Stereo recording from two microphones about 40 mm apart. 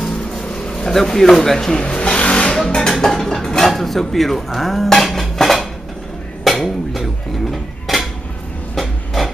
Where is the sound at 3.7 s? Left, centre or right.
Centre.